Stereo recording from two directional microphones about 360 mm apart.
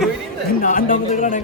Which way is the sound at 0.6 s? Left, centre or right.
Left.